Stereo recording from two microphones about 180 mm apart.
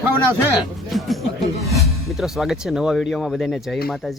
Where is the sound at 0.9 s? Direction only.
Centre (ahead or behind).